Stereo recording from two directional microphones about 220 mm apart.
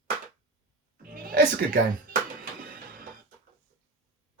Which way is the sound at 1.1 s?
40° right (ahead or behind).